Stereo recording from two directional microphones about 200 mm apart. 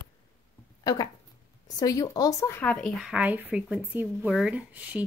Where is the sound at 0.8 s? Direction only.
20° left (ahead or behind); by 5.0 s 5° right (ahead or behind).